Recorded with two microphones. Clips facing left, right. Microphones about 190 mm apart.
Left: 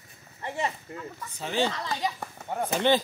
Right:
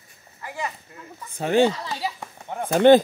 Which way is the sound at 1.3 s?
55° right (ahead or behind).